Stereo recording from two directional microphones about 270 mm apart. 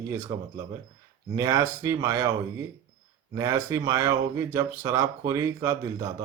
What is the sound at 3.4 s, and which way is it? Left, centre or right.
Speech, centre.